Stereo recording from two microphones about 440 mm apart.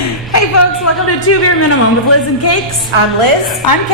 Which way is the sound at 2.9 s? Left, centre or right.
Right.